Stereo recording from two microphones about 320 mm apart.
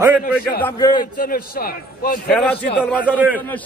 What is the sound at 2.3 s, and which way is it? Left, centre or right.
A man's voice, centre.